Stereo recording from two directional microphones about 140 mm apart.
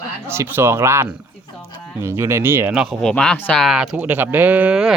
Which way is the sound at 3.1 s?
10° left (ahead or behind).